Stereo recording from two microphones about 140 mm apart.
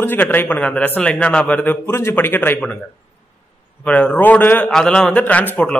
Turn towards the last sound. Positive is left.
turn(degrees=10)  # may be behind; listen again after turning